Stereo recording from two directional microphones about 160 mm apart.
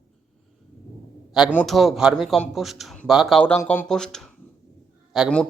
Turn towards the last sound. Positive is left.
turn(degrees=0)  # may be behind; listen again after turning